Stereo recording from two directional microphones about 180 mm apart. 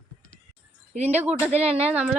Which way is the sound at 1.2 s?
10° right (ahead or behind).